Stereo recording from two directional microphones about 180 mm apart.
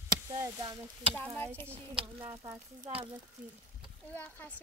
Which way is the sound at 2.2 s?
20° right (ahead or behind).